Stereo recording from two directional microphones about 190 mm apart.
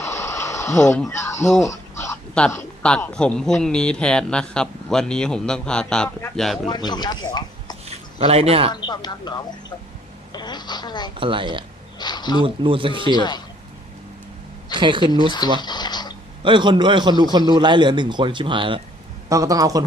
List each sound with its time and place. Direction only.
0.0 s a sound: 15° left (ahead or behind)
0.8 s speech: 5° left (ahead or behind)
1.6 s a sound: 15° left (ahead or behind)
2.3 s speech: 5° left (ahead or behind)
6.7 s speech: 20° left (ahead or behind)
7.9 s a sound: 30° right (ahead or behind)
8.7 s speech: 20° left (ahead or behind)
11.2 s speech: 25° right (ahead or behind)
11.9 s speech: 20° left (ahead or behind)
12.4 s speech: 25° right (ahead or behind)
13.1 s speech: 20° left (ahead or behind)
14.8 s speech: 25° right (ahead or behind)
15.6 s a sound: 20° left (ahead or behind)
16.4 s a man's voice: 25° right (ahead or behind)